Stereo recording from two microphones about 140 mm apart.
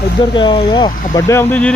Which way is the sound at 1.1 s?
20° left (ahead or behind).